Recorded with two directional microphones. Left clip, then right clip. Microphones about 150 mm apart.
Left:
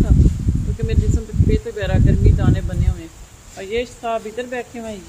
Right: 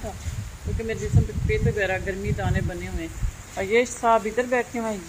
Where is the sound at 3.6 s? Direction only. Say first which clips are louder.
Right 2 dB; 15° right (ahead or behind).